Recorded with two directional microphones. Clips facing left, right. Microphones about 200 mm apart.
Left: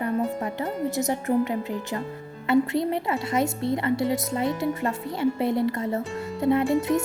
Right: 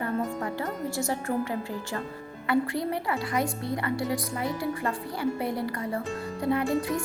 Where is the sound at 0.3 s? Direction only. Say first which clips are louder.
Left 3 dB; 20° left (ahead or behind).